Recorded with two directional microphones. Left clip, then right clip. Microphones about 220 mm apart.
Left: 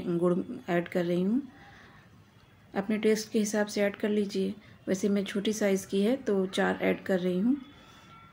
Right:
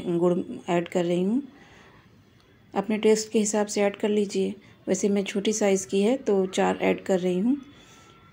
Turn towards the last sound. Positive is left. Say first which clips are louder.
# right 4 dB
turn(degrees=0)  # may be behind; listen again after turning